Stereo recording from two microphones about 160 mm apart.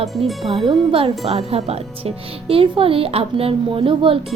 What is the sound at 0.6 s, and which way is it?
Speech, 35° right (ahead or behind).